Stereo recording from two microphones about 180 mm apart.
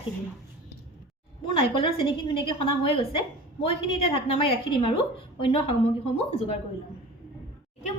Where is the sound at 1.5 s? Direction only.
30° left (ahead or behind).